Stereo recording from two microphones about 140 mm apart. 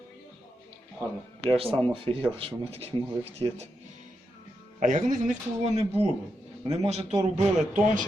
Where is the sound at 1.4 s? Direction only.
40° right (ahead or behind).